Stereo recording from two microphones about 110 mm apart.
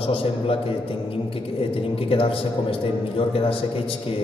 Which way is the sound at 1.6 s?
60° left (ahead or behind).